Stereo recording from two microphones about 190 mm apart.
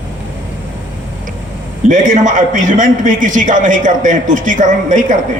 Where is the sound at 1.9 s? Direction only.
45° right (ahead or behind).